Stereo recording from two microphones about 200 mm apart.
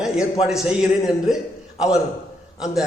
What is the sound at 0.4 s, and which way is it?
Speech, centre (ahead or behind).